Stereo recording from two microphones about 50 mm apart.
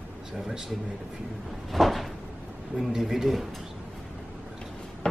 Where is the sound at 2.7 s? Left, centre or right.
Centre.